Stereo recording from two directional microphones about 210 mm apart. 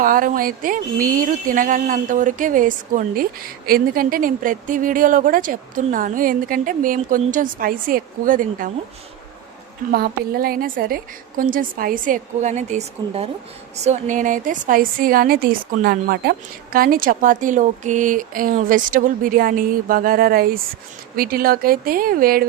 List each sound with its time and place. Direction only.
0.0 s speech: 40° right (ahead or behind)
9.9 s speech: 45° right (ahead or behind)